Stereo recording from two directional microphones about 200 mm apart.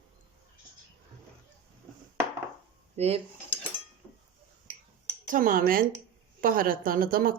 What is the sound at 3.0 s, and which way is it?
Dishes, 35° right (ahead or behind).